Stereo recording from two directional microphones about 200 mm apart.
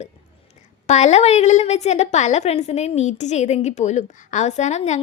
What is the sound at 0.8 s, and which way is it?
A woman's voice, 35° left (ahead or behind).